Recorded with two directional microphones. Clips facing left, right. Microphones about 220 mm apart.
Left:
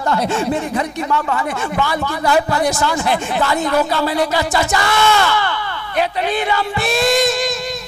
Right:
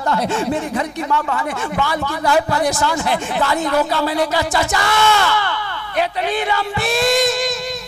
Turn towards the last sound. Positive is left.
turn(degrees=10)  # may be behind; listen again after turning